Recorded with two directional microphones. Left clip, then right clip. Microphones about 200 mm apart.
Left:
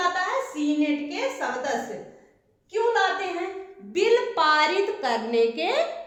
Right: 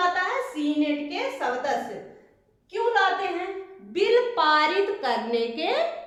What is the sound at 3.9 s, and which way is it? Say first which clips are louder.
A woman's voice: even; 25° left (ahead or behind).